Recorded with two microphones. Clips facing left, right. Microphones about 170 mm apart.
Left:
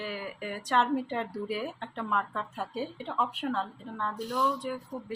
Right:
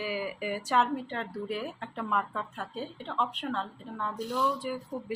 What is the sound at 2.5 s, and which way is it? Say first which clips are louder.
Speech: left 3 dB; 10° left (ahead or behind).